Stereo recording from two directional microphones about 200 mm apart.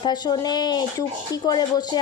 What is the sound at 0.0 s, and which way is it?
Speech, 20° left (ahead or behind).